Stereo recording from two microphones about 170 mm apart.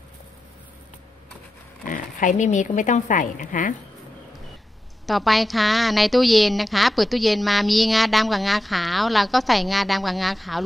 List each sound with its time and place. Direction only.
1.9 s speech: 50° left (ahead or behind)
5.0 s a woman's voice: centre (ahead or behind)